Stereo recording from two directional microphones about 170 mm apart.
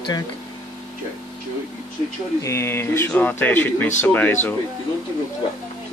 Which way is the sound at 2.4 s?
15° left (ahead or behind).